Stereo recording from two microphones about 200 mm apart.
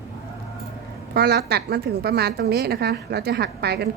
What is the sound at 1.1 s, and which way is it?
A woman's voice, 55° right (ahead or behind).